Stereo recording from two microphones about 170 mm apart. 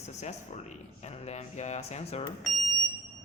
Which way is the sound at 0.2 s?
40° left (ahead or behind).